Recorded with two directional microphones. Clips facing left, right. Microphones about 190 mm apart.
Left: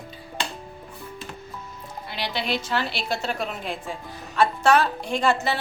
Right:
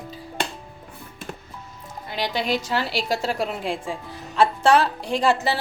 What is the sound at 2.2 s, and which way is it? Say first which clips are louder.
Speech: right 3 dB; 45° right (ahead or behind).